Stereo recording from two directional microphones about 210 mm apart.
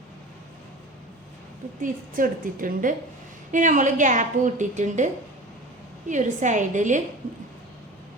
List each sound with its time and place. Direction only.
1.8 s a woman's voice: 40° right (ahead or behind)